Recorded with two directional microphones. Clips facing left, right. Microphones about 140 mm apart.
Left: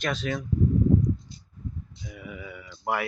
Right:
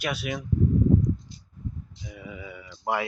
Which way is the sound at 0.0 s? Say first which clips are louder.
Left 1 dB; 10° right (ahead or behind).